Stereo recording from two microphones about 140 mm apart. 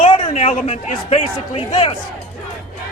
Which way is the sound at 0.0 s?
45° left (ahead or behind).